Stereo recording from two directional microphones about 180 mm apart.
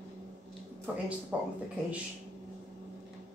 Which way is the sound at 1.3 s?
5° right (ahead or behind).